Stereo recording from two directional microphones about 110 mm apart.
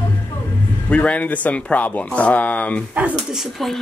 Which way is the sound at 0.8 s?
10° left (ahead or behind).